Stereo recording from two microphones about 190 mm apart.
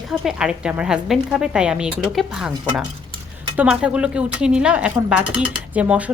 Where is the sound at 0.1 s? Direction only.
5° right (ahead or behind).